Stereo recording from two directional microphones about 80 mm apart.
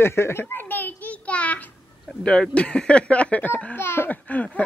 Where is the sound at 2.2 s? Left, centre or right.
Centre.